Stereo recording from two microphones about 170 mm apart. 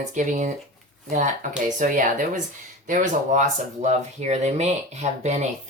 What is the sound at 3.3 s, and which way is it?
Speech, 45° right (ahead or behind).